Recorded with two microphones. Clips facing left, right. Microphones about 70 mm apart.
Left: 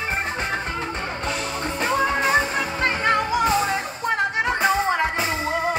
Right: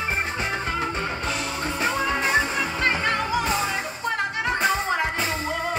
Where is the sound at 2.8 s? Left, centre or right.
Left.